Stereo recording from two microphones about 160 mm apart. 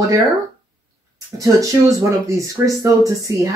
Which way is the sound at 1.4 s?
20° right (ahead or behind).